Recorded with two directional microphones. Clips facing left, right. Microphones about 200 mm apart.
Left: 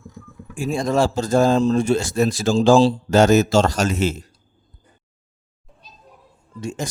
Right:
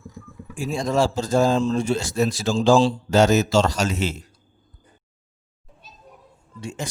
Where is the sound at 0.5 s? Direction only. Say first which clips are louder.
Left 2 dB; 55° left (ahead or behind).